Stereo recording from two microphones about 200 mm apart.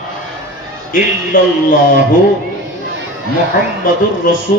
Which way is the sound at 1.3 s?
45° left (ahead or behind).